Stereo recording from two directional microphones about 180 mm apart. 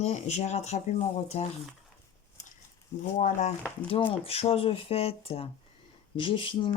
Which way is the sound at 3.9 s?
30° left (ahead or behind).